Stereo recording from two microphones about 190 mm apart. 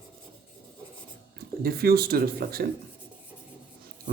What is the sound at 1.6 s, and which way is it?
Speech, 55° right (ahead or behind).